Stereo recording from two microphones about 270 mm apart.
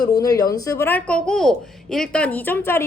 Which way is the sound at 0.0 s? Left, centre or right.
Centre.